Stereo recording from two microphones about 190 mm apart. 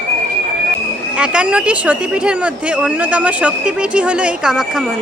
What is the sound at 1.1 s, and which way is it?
A woman's voice, 5° right (ahead or behind).